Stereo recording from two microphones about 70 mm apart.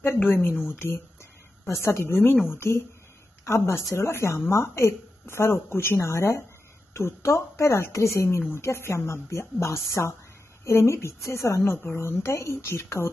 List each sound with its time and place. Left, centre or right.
0.0 s a woman's voice: left